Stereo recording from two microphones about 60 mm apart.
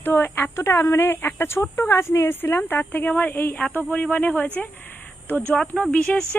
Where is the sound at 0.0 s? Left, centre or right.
Left.